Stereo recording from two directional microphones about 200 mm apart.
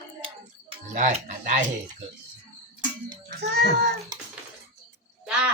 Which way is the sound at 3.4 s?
55° right (ahead or behind).